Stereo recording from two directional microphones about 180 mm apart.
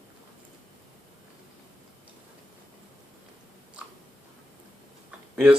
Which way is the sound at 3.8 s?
5° right (ahead or behind).